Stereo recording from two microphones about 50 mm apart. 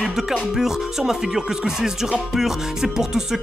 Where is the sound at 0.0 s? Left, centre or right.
Centre.